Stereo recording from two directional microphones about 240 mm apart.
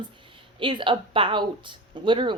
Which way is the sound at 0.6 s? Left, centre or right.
Centre.